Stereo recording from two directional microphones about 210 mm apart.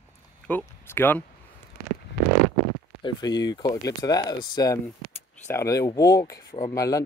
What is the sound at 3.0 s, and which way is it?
Speech, 20° left (ahead or behind).